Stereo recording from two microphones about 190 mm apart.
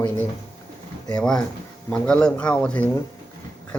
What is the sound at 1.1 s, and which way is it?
Speech, 5° left (ahead or behind).